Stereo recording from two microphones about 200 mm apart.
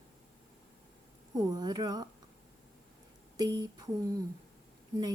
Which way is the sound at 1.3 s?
20° right (ahead or behind).